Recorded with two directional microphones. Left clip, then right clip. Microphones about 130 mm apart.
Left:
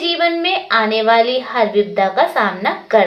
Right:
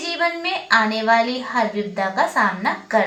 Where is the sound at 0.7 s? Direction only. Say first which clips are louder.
Left 2 dB; 20° left (ahead or behind).